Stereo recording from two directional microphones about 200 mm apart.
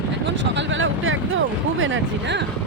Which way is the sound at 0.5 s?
75° right (ahead or behind).